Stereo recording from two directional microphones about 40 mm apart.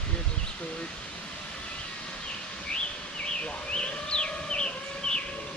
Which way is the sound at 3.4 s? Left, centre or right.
Left.